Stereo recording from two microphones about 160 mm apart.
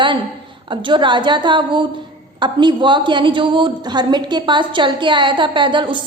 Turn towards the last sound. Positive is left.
turn(degrees=-30)  # may be behind; listen again after turning